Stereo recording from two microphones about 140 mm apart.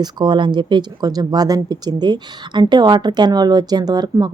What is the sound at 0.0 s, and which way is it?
Speech, 30° right (ahead or behind).